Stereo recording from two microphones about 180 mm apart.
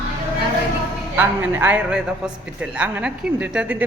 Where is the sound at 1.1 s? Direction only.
10° right (ahead or behind).